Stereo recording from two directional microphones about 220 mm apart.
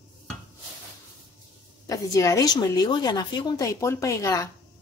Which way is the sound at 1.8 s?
15° left (ahead or behind).